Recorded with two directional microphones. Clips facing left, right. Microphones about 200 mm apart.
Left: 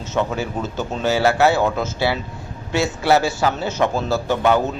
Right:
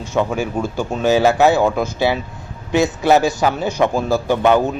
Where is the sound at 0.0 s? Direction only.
10° right (ahead or behind).